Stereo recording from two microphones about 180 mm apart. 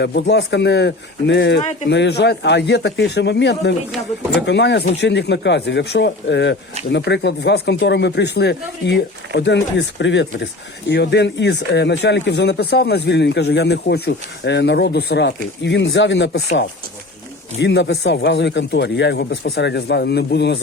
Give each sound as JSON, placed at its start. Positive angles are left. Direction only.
{"t": 0.0, "sound": "speech", "side_deg": 70}
{"t": 17.6, "sound": "speech", "side_deg": 75}